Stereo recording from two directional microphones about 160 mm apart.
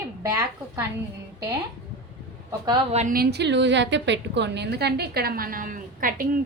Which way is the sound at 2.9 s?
60° right (ahead or behind).